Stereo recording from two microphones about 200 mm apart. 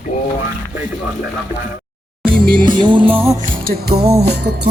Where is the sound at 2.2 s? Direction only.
50° right (ahead or behind).